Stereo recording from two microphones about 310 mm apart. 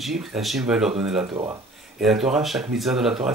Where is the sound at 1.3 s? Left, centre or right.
Centre.